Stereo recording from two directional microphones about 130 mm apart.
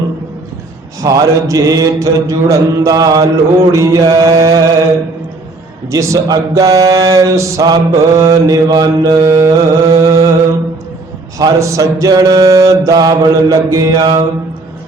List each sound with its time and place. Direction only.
1.0 s mantra: 25° right (ahead or behind)
5.9 s mantra: 25° right (ahead or behind)
11.3 s mantra: 25° right (ahead or behind)